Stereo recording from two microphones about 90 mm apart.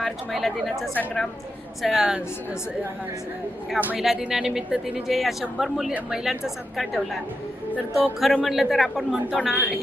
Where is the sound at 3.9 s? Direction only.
5° right (ahead or behind).